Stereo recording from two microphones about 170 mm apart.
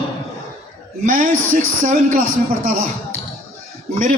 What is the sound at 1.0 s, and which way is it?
A man's voice, 50° right (ahead or behind).